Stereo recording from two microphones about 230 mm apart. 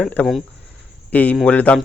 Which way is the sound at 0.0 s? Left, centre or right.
Centre.